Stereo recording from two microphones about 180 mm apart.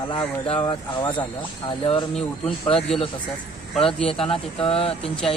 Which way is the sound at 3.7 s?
Centre (ahead or behind).